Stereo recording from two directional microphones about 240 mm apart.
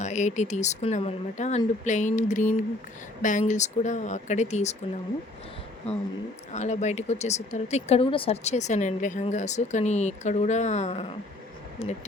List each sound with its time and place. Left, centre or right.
0.0 s speech: left
6.5 s speech: left